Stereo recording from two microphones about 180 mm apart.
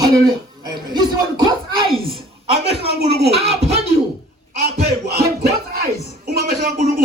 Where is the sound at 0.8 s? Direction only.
25° right (ahead or behind).